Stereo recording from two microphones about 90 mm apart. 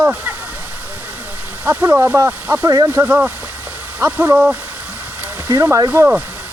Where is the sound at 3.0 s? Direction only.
20° right (ahead or behind).